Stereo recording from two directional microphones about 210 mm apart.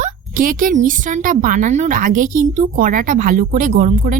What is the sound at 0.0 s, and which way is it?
A woman's voice, 40° right (ahead or behind).